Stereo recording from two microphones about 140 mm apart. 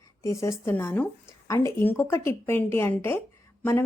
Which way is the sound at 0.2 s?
20° left (ahead or behind).